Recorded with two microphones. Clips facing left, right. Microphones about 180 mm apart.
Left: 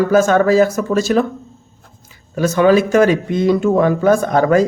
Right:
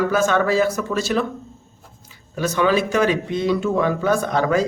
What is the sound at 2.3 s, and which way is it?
A man's voice, 45° left (ahead or behind).